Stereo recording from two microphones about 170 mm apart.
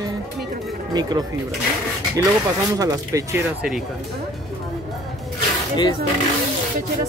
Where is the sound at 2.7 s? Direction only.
20° right (ahead or behind).